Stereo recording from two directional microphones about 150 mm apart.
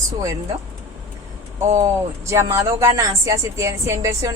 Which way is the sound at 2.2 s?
20° right (ahead or behind).